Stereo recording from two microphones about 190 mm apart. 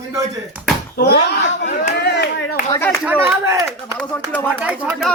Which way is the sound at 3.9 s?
10° left (ahead or behind).